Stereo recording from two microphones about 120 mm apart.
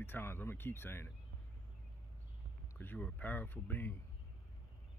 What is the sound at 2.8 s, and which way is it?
Speech, 15° left (ahead or behind).